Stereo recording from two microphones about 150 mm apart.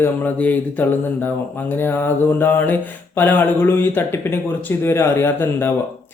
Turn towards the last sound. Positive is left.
turn(degrees=15)  # may be behind; listen again after turning